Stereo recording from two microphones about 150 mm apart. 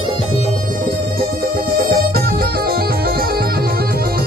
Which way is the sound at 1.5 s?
80° right.